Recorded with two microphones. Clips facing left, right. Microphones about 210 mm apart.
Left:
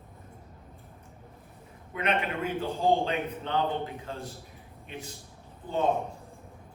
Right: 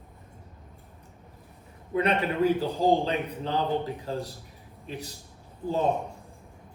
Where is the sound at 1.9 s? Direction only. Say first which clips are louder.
Right 4 dB; 35° right (ahead or behind).